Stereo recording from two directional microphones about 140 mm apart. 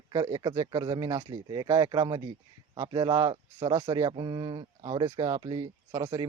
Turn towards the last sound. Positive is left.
turn(degrees=-25)  # may be behind; listen again after turning